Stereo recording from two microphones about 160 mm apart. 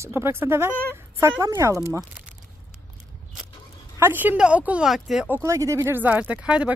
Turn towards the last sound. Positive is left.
turn(degrees=-5)  # may be behind; listen again after turning